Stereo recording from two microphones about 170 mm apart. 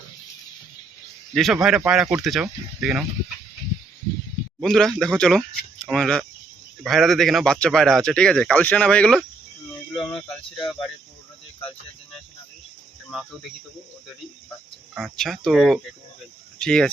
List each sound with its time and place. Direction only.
1.3 s speech: centre (ahead or behind)
4.6 s speech: centre (ahead or behind)
10.2 s speech: 30° left (ahead or behind)
15.0 s speech: centre (ahead or behind)